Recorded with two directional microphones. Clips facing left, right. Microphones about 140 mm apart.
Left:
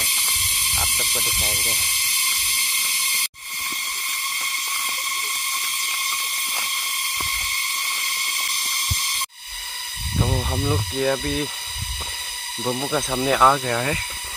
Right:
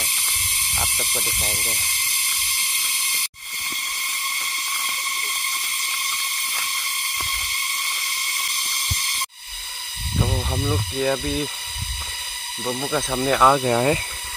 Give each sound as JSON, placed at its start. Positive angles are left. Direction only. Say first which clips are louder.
{"t": 0.7, "sound": "speech", "louder": "right 1 dB", "side_deg": -10}
{"t": 10.2, "sound": "speech", "louder": "left 1 dB", "side_deg": 5}
{"t": 12.6, "sound": "speech", "louder": "left 1 dB", "side_deg": 10}
{"t": 13.5, "sound": "speech", "louder": "right 3 dB", "side_deg": -20}